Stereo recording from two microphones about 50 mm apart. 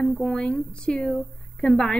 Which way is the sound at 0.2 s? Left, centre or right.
Centre.